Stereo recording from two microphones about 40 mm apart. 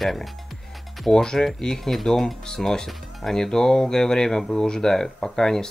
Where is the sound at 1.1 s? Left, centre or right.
Centre.